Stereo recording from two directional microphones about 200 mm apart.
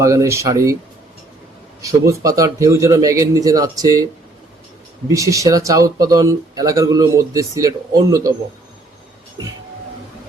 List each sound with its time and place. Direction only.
0.0 s speech: 15° right (ahead or behind)
1.8 s speech: 15° right (ahead or behind)
5.0 s speech: 15° right (ahead or behind)